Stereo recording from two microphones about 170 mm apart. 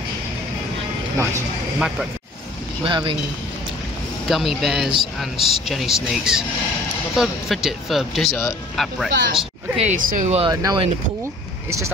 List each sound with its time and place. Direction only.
1.1 s speech: 15° right (ahead or behind)
2.8 s speech: 30° right (ahead or behind)
4.3 s speech: centre (ahead or behind)
9.8 s speech: 45° right (ahead or behind)
10.4 s speech: 25° right (ahead or behind)